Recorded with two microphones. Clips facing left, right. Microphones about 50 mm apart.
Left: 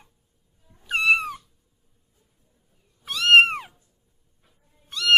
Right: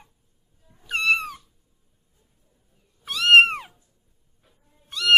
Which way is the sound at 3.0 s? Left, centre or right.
Centre.